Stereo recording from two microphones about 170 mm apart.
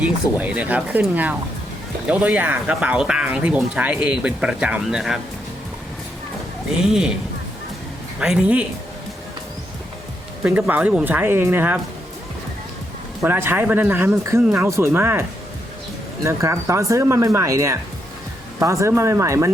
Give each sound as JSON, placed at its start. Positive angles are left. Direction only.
{"t": 0.0, "sound": "speech", "side_deg": -10}
{"t": 6.8, "sound": "speech", "side_deg": -5}
{"t": 8.2, "sound": "speech", "side_deg": -5}
{"t": 10.4, "sound": "speech", "side_deg": -10}
{"t": 13.2, "sound": "speech", "side_deg": -10}
{"t": 16.2, "sound": "speech", "side_deg": -15}